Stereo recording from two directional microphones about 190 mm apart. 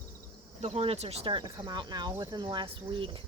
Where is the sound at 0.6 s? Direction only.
30° right (ahead or behind).